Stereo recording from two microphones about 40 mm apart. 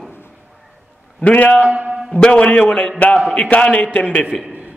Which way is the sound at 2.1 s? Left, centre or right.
Left.